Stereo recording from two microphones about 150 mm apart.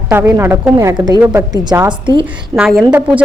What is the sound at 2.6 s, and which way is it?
Speech, centre (ahead or behind).